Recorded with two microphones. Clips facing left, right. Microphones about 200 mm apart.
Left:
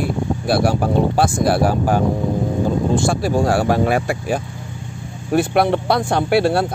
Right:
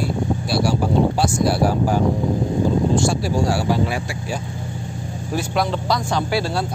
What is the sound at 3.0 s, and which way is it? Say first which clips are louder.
Speech: left 2 dB; 55° left (ahead or behind).